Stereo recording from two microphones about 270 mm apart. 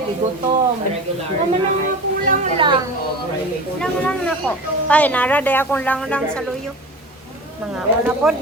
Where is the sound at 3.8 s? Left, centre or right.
Centre.